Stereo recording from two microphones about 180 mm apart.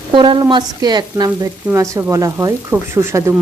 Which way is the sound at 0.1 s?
25° right (ahead or behind).